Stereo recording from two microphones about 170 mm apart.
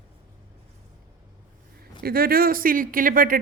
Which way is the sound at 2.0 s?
60° right (ahead or behind).